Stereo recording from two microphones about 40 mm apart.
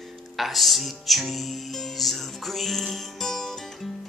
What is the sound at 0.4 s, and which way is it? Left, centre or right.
Music, centre.